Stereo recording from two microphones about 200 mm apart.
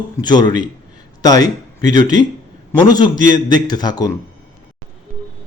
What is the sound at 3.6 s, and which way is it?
Speech, 20° left (ahead or behind).